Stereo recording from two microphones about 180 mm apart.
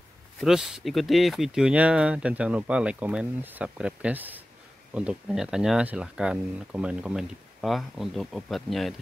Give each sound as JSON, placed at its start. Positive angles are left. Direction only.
{"t": 0.4, "sound": "speech", "side_deg": -5}